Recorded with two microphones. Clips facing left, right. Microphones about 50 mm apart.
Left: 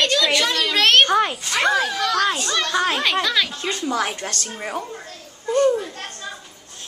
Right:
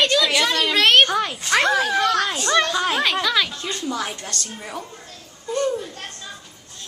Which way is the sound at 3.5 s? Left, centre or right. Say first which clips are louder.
Left 3 dB; left.